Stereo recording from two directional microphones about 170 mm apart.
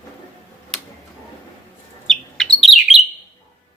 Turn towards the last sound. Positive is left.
turn(degrees=0)  # may be behind; listen again after turning